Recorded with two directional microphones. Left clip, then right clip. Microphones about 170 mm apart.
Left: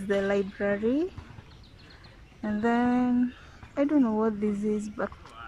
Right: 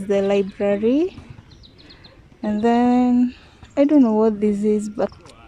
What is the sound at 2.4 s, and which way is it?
Speech, 20° right (ahead or behind).